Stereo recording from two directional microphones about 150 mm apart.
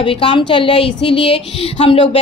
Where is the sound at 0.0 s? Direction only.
35° left (ahead or behind).